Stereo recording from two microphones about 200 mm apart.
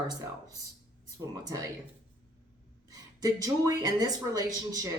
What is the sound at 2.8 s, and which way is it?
Speech, 20° right (ahead or behind).